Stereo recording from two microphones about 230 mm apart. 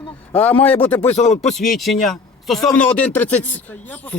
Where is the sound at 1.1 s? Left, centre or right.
Left.